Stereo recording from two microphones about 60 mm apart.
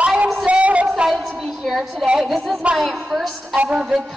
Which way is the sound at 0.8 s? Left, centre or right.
Centre.